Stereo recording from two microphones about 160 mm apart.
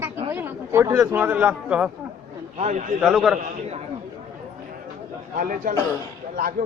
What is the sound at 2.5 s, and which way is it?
Speech, 45° right (ahead or behind).